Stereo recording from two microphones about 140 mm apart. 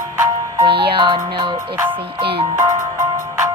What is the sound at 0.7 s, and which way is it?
Speech, 35° right (ahead or behind).